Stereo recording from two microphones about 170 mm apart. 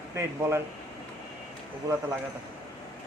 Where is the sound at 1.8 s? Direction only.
20° right (ahead or behind).